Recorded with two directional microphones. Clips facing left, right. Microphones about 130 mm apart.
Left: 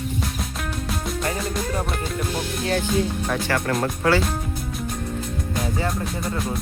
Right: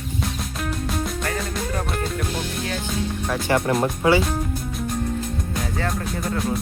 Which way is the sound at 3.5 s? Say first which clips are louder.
Right 6 dB; 20° right (ahead or behind).